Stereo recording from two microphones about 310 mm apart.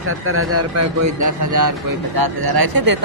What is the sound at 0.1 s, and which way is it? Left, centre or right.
Speech, right.